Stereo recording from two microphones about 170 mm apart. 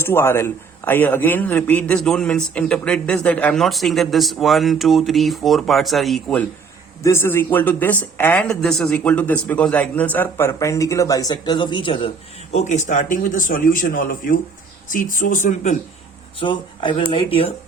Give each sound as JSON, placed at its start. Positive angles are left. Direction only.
{"t": 0.0, "sound": "a man's voice", "side_deg": 15}
{"t": 7.0, "sound": "speech", "side_deg": 15}
{"t": 16.4, "sound": "speech", "side_deg": 30}